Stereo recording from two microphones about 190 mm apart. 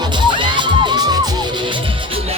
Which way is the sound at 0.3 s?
25° right (ahead or behind).